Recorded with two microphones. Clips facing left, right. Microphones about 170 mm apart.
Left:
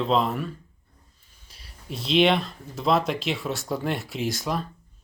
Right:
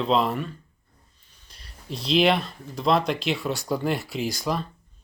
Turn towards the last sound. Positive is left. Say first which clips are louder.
# right 1 dB
turn(degrees=0)  # may be behind; listen again after turning